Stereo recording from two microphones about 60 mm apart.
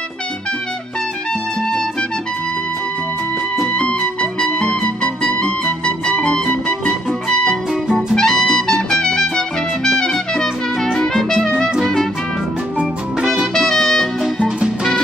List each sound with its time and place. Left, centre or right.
3.6 s music: centre
8.1 s music: centre
13.6 s music: centre